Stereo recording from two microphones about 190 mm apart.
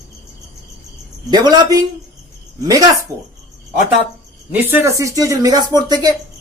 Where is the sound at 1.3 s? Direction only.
20° right (ahead or behind).